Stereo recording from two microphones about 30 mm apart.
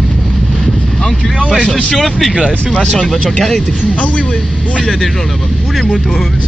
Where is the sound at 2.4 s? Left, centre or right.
Left.